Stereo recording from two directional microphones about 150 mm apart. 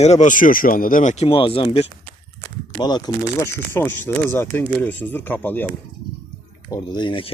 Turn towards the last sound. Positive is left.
turn(degrees=35)  # may be behind; listen again after turning